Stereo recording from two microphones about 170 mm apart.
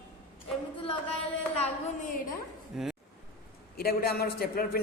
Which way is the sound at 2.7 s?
5° right (ahead or behind).